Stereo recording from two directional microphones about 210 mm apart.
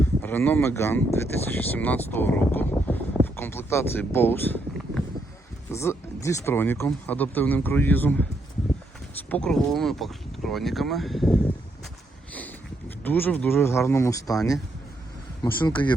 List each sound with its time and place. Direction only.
0.0 s speech: 10° left (ahead or behind)
3.2 s a sound: 10° left (ahead or behind)
5.7 s speech: 15° left (ahead or behind)
9.3 s speech: 5° left (ahead or behind)
12.3 s a sound: 5° left (ahead or behind)
13.0 s speech: 10° left (ahead or behind)
15.4 s speech: 20° left (ahead or behind)